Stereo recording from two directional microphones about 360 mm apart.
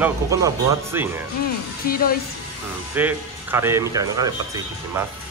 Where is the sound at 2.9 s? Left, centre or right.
Centre.